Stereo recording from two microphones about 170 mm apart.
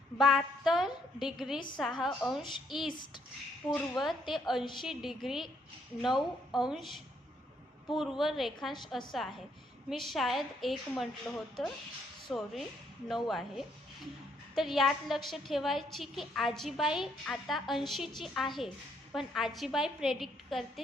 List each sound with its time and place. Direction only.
0.2 s a woman's voice: centre (ahead or behind)
1.5 s a child's voice: 25° left (ahead or behind)
1.8 s a woman's voice: centre (ahead or behind)
2.8 s a child's voice: 25° left (ahead or behind)
3.7 s a woman's voice: centre (ahead or behind)